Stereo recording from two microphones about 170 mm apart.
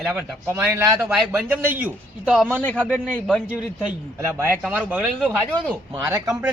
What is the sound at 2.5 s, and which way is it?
Speech, 10° left (ahead or behind).